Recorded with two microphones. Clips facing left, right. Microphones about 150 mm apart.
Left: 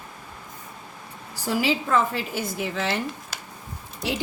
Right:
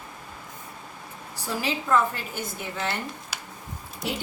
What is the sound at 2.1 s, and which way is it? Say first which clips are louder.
Speech: left 6 dB; 90° left.